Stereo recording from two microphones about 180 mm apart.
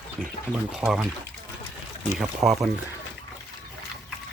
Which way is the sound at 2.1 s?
Centre (ahead or behind).